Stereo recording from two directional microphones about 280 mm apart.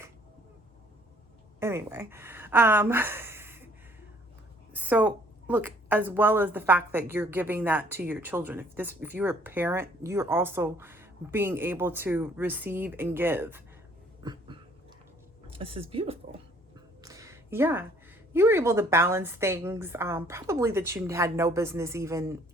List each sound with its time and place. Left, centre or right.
1.5 s speech: centre
4.7 s a woman's voice: centre
14.2 s a sound: centre
15.4 s speech: centre
17.0 s a sound: centre
18.3 s a woman's voice: centre